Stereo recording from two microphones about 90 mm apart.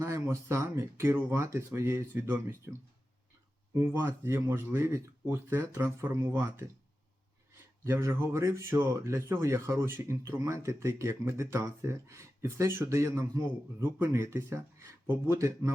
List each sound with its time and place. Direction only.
0.0 s speech: 35° right (ahead or behind)
3.8 s speech: 30° right (ahead or behind)
7.9 s speech: 30° right (ahead or behind)